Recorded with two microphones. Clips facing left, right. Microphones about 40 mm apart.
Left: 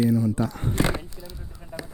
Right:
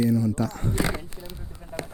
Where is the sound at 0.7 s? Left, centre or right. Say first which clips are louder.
Left 3 dB; left.